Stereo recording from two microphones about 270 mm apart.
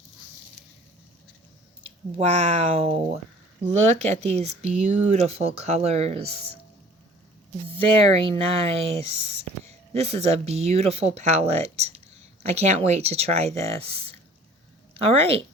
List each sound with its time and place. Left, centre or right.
2.1 s speech: right
7.8 s speech: centre